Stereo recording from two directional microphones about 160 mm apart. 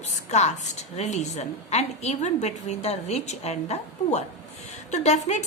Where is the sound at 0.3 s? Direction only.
45° left (ahead or behind).